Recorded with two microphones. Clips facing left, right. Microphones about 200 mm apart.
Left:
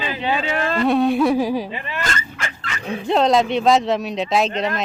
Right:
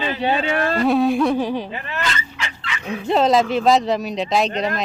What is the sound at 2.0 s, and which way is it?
Fowl, 50° left (ahead or behind).